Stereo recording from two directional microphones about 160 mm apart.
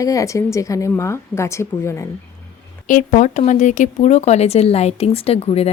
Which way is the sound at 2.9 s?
55° left (ahead or behind).